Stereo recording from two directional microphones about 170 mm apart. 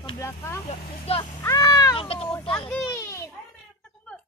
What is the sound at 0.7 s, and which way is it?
Speech, 35° left (ahead or behind).